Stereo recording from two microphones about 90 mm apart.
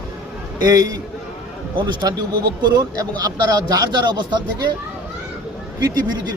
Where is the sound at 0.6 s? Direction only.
40° right (ahead or behind).